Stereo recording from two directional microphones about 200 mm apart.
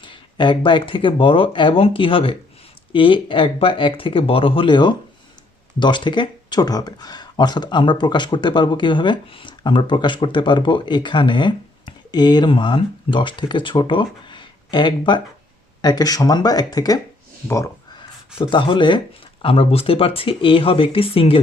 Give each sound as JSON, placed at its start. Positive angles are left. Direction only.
{"t": 0.0, "sound": "speech", "side_deg": 25}
{"t": 18.3, "sound": "speech", "side_deg": 25}